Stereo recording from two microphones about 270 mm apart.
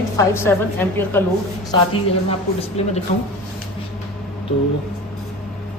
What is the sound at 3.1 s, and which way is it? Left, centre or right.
Speech, left.